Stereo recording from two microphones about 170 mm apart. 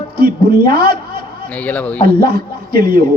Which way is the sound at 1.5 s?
10° left (ahead or behind).